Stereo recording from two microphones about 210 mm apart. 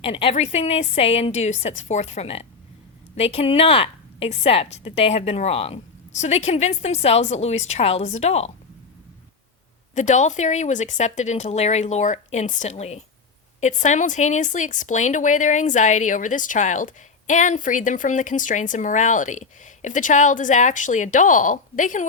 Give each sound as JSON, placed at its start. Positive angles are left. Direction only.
{"t": 0.0, "sound": "a woman's voice", "side_deg": 25}
{"t": 9.9, "sound": "a woman's voice", "side_deg": 35}